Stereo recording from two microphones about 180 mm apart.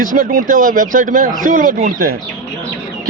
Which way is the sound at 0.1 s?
55° right (ahead or behind).